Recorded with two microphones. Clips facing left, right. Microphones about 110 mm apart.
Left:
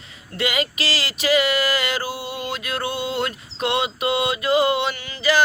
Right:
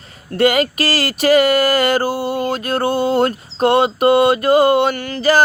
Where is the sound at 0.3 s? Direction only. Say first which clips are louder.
Right 10 dB; 50° right (ahead or behind).